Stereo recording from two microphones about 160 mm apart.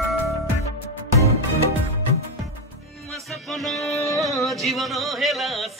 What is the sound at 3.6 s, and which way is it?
Music, centre (ahead or behind).